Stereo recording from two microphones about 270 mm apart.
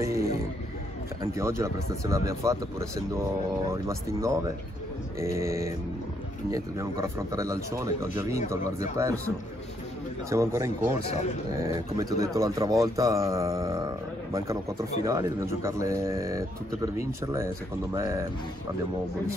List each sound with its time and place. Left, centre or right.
0.0 s speech: centre
10.3 s speech: centre